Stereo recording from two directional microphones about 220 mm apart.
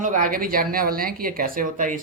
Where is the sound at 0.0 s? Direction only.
35° right (ahead or behind).